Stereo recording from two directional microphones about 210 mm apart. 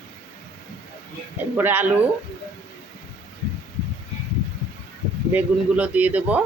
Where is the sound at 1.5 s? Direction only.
10° right (ahead or behind).